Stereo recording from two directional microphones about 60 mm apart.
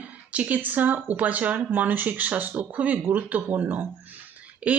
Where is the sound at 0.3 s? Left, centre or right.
Right.